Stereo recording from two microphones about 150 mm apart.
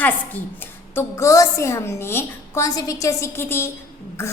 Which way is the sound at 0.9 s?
20° left (ahead or behind).